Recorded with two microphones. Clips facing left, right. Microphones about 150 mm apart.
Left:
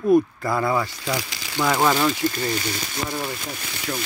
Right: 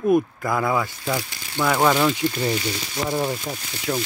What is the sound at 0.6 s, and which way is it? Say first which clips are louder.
Speech: even; centre (ahead or behind).